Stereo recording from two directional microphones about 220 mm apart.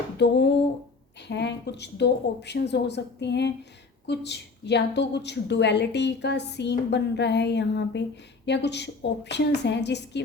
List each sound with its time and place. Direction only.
0.2 s a woman's voice: 50° left (ahead or behind)